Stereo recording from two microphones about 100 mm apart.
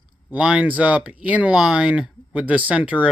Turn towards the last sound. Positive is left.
turn(degrees=-15)  # may be behind; listen again after turning